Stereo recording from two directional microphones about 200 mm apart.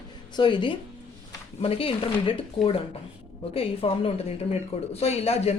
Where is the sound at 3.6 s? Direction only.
30° left (ahead or behind).